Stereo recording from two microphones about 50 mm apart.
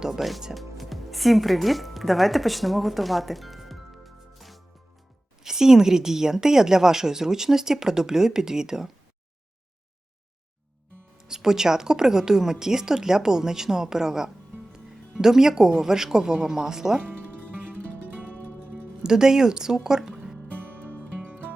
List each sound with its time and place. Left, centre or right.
0.0 s speech: centre
5.4 s a woman's voice: centre
11.2 s a woman's voice: centre
18.3 s music: right
19.0 s speech: centre
20.5 s music: right